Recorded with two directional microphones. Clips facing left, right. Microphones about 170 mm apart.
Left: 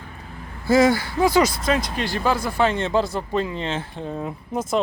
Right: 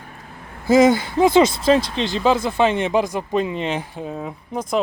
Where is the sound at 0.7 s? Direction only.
20° right (ahead or behind).